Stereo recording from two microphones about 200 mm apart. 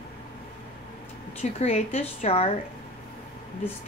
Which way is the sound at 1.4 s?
35° left (ahead or behind).